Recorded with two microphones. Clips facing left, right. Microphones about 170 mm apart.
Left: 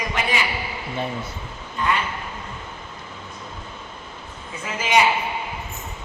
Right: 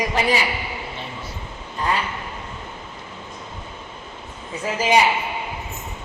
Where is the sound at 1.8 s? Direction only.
35° right (ahead or behind).